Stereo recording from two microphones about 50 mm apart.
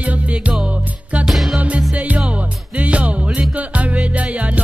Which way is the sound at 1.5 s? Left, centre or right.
Right.